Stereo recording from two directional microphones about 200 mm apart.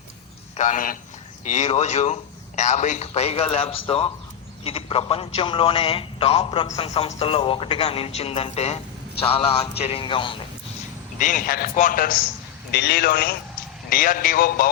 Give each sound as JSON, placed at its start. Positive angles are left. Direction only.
{"t": 0.5, "sound": "a man's voice", "side_deg": 40}
{"t": 11.2, "sound": "a man's voice", "side_deg": 40}
{"t": 12.7, "sound": "a man's voice", "side_deg": 55}